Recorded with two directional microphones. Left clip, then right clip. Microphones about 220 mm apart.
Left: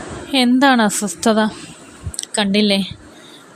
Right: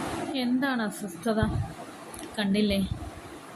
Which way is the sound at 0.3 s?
50° left (ahead or behind).